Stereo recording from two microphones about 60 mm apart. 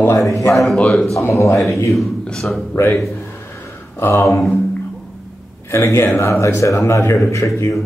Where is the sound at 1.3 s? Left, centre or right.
Left.